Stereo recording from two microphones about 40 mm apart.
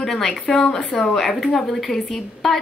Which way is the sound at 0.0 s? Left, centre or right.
Centre.